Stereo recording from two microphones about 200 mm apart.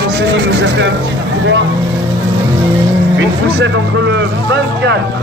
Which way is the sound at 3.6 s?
60° right (ahead or behind).